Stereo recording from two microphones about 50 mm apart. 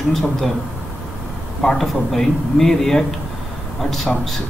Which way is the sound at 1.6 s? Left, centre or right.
Centre.